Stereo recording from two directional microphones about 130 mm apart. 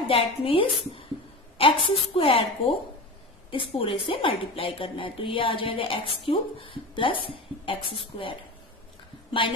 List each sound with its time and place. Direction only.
0.1 s a woman's voice: 45° left (ahead or behind)